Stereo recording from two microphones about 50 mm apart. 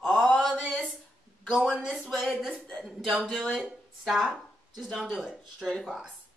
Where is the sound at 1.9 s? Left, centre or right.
Centre.